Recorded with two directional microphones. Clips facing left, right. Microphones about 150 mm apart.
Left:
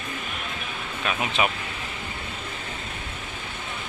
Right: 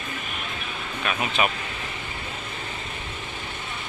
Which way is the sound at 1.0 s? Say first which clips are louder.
Even; 20° left (ahead or behind).